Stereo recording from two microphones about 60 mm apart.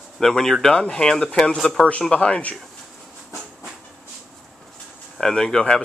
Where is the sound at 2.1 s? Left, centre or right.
Left.